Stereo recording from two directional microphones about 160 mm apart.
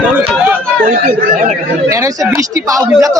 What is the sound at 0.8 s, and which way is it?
Speech, 60° right (ahead or behind).